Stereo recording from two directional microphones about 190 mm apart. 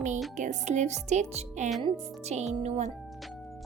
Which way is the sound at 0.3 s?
40° right (ahead or behind).